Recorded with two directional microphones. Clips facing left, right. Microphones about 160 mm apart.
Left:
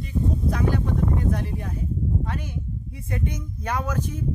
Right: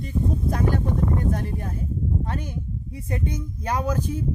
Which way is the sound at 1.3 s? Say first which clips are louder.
Even; 45° right (ahead or behind).